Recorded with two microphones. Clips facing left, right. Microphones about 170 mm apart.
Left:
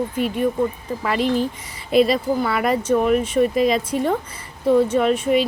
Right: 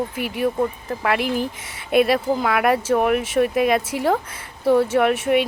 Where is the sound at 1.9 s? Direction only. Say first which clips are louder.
Left 1 dB; 65° right (ahead or behind).